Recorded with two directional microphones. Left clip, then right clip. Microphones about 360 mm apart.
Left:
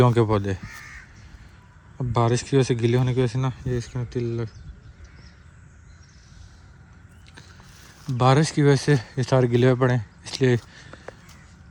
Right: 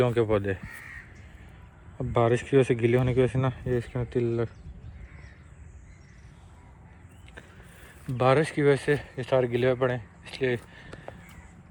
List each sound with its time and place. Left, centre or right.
0.0 s speech: centre
2.0 s speech: centre
8.0 s speech: centre